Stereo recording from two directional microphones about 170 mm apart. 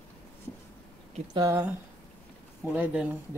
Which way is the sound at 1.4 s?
20° right (ahead or behind).